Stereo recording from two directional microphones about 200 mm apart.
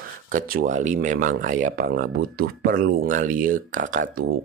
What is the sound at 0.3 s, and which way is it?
Speech, 45° right (ahead or behind).